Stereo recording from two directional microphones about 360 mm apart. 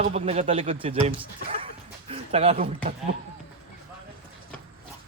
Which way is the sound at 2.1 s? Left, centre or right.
Centre.